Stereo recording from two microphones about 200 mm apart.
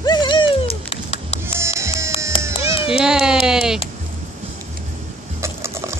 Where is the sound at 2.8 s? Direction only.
5° right (ahead or behind).